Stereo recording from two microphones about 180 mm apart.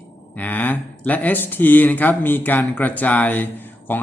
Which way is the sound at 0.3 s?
10° left (ahead or behind).